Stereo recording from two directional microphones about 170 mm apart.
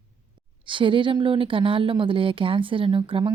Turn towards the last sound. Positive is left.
turn(degrees=-30)  # may be behind; listen again after turning